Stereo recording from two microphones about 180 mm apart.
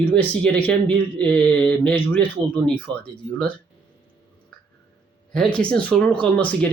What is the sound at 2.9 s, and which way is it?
Speech, 25° right (ahead or behind).